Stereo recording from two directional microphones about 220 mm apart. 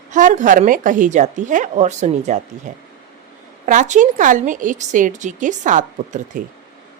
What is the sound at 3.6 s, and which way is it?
A woman's voice, 35° right (ahead or behind).